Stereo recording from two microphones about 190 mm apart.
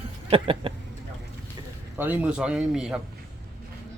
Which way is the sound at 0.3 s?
30° right (ahead or behind).